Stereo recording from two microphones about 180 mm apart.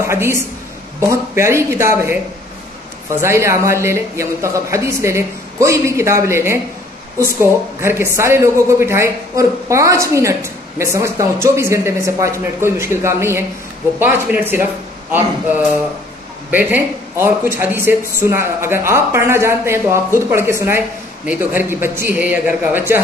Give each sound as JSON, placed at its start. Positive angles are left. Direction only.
{"t": 0.0, "sound": "speech", "side_deg": -15}
{"t": 7.8, "sound": "speech", "side_deg": -15}